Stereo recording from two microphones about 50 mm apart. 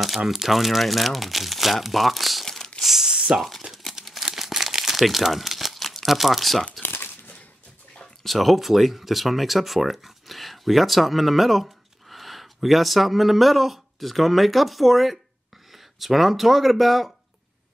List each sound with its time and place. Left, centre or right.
0.3 s speech: centre
2.4 s crumpling: centre
2.8 s a sound: centre
3.3 s speech: centre
3.9 s crumpling: centre
6.8 s crumpling: left
8.0 s speech: centre